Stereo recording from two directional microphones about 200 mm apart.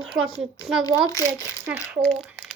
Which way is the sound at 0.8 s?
20° left (ahead or behind).